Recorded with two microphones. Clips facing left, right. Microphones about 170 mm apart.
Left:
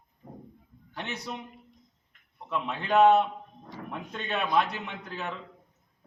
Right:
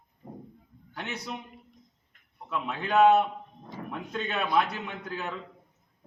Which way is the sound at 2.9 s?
5° right (ahead or behind).